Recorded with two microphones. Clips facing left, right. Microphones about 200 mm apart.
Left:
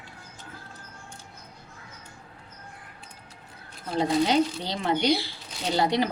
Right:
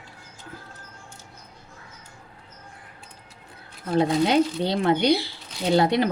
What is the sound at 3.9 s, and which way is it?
A woman's voice, 55° right (ahead or behind).